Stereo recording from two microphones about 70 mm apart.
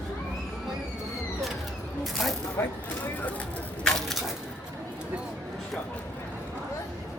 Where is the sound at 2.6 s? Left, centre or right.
Left.